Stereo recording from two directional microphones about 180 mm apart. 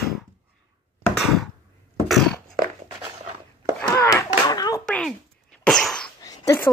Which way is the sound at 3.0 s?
35° right (ahead or behind).